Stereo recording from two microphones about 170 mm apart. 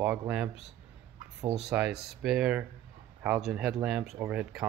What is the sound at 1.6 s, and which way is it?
Speech, 5° right (ahead or behind).